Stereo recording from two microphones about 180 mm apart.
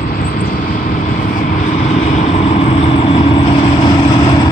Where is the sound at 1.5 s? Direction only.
40° left (ahead or behind).